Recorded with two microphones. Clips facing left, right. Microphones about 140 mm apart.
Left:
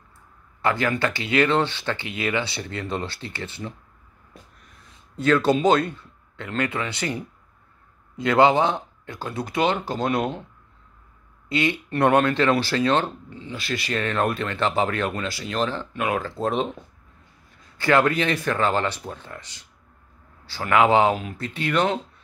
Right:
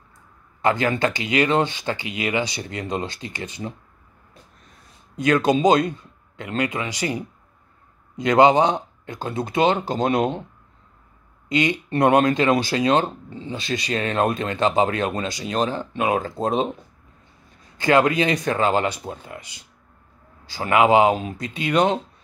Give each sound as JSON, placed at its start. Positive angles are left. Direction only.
{"t": 0.6, "sound": "a man's voice", "side_deg": -20}
{"t": 5.1, "sound": "a man's voice", "side_deg": -15}
{"t": 11.4, "sound": "a man's voice", "side_deg": -15}
{"t": 13.3, "sound": "speech", "side_deg": -25}
{"t": 17.7, "sound": "a man's voice", "side_deg": -15}